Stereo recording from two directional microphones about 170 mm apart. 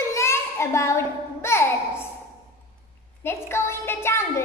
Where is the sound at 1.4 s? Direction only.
15° left (ahead or behind).